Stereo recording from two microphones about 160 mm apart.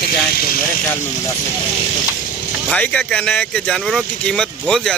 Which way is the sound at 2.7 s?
5° left (ahead or behind).